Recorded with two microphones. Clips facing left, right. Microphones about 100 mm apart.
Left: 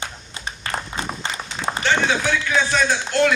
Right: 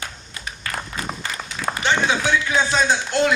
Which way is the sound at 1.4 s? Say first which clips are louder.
Even; 30° left (ahead or behind).